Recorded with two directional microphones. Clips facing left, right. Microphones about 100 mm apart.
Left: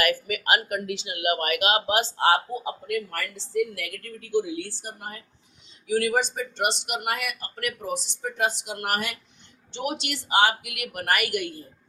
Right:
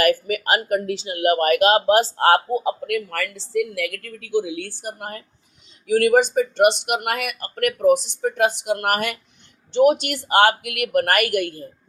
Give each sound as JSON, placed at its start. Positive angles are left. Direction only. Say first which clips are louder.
{"t": 0.0, "sound": "speech", "louder": "right 6 dB", "side_deg": -35}
{"t": 2.1, "sound": "a woman's voice", "louder": "right 5 dB", "side_deg": -55}